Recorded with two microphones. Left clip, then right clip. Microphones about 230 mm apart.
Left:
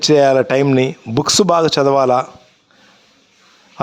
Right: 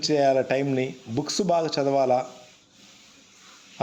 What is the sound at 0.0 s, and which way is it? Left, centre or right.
A man's voice, left.